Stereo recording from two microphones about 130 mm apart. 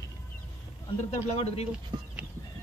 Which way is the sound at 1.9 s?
35° right (ahead or behind).